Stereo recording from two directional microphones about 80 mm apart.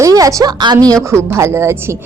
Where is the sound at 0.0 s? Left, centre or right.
Right.